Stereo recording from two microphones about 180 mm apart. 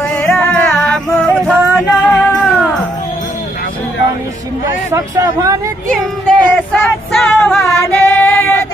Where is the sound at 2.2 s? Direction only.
10° left (ahead or behind).